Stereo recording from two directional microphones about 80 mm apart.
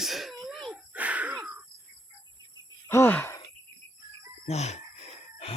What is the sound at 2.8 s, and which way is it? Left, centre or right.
Speech, left.